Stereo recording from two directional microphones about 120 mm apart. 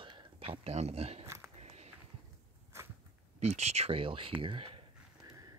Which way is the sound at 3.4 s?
65° right (ahead or behind).